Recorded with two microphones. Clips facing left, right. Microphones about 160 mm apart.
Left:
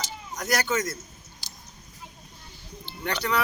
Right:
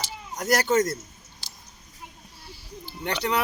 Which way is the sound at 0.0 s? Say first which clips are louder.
Right 2 dB; 30° right (ahead or behind).